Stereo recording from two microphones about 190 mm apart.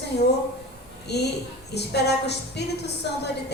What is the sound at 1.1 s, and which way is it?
A woman's voice, 60° left (ahead or behind).